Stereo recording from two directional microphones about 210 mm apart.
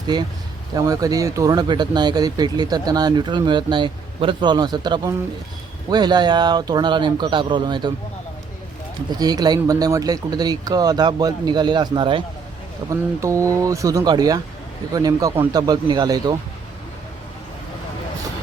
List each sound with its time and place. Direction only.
0.1 s speech: 20° right (ahead or behind)
9.0 s speech: 20° right (ahead or behind)